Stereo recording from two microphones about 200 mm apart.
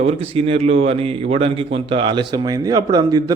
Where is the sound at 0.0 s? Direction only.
30° right (ahead or behind).